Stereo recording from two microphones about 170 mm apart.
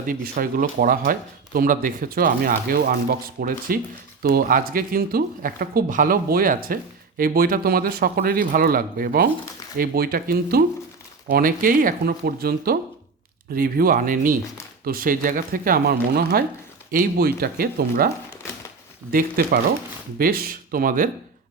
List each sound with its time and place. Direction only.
0.0 s speech: 55° right (ahead or behind)
19.1 s speech: 60° right (ahead or behind)